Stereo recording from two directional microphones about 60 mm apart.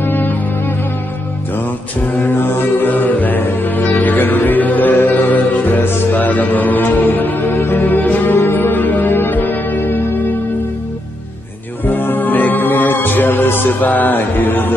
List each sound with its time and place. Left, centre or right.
0.0 s music: left
2.1 s music: left
11.8 s music: left